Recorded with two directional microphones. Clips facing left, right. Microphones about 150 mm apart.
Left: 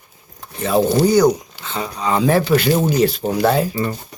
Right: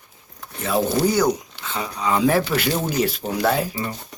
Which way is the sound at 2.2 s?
10° right (ahead or behind).